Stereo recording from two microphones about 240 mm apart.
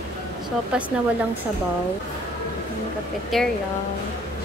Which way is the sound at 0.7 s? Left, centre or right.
Centre.